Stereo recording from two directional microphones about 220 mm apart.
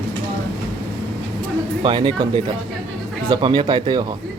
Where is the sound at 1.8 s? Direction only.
20° right (ahead or behind).